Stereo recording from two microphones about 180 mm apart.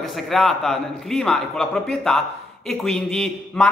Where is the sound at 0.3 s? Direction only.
5° left (ahead or behind).